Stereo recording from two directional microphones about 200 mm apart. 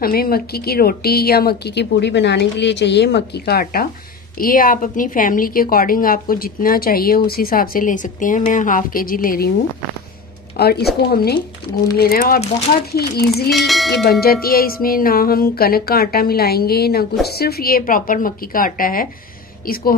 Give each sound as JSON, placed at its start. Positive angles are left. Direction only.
{"t": 0.0, "sound": "a woman's voice", "side_deg": 50}
{"t": 10.6, "sound": "a woman's voice", "side_deg": 50}
{"t": 13.5, "sound": "speech", "side_deg": 0}
{"t": 14.2, "sound": "a woman's voice", "side_deg": 50}